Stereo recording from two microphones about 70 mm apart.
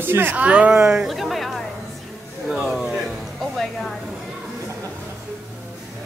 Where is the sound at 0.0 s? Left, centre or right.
Right.